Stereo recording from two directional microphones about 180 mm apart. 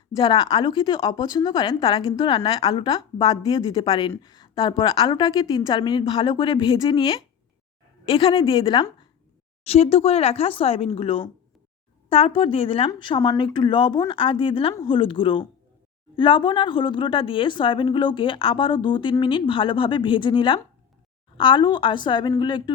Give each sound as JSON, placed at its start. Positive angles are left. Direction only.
{"t": 0.2, "sound": "speech", "side_deg": 25}